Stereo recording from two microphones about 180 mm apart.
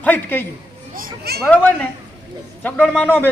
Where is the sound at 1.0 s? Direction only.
60° right (ahead or behind).